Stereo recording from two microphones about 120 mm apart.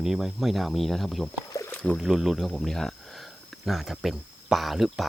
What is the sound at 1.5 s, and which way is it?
Rowboat, 30° left (ahead or behind).